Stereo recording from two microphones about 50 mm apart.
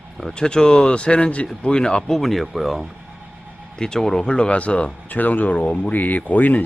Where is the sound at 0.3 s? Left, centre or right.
Centre.